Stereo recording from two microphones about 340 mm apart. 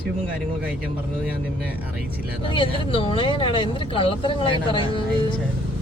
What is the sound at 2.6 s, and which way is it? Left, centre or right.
Speech, centre.